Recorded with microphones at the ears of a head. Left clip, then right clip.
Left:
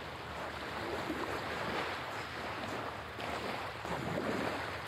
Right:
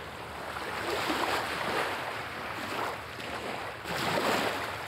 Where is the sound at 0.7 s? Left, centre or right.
Right.